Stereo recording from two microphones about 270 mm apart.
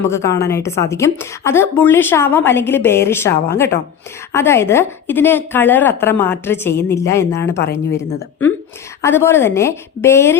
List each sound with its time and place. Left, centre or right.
0.0 s a woman's voice: centre